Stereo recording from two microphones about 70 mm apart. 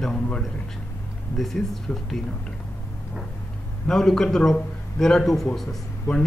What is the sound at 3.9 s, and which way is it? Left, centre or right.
A man's voice, centre.